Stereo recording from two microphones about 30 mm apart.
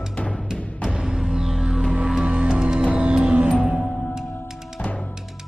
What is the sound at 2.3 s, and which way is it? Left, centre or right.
Music, right.